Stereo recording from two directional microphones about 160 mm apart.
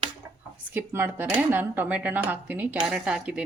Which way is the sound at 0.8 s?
15° right (ahead or behind).